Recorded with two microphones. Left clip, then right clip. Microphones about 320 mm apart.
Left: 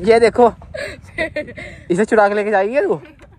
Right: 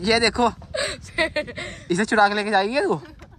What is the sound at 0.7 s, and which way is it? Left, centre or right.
A woman's voice, centre.